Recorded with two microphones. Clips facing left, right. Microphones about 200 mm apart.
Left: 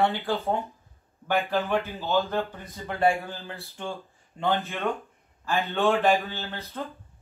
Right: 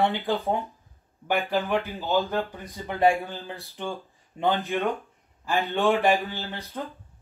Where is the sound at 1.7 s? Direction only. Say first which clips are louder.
Right 1 dB; 15° right (ahead or behind).